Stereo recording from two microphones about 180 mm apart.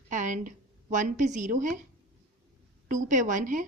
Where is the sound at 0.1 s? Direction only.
45° right (ahead or behind).